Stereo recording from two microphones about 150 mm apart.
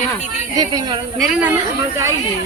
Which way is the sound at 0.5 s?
25° right (ahead or behind).